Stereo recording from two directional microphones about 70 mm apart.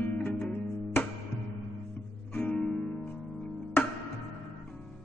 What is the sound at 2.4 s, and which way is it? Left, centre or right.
Music, centre.